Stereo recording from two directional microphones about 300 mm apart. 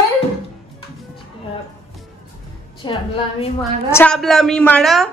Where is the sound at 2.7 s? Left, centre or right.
Centre.